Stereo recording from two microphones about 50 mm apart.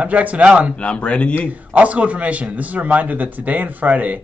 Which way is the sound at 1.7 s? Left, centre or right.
Right.